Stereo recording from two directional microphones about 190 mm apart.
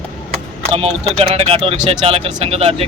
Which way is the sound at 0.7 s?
30° right (ahead or behind).